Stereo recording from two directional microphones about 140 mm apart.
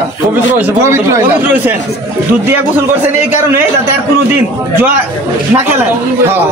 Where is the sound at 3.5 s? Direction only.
15° right (ahead or behind).